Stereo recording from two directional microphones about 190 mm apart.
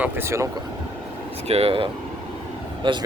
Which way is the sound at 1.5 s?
30° right (ahead or behind).